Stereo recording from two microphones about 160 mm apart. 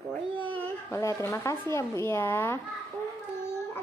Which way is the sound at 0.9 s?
20° left (ahead or behind).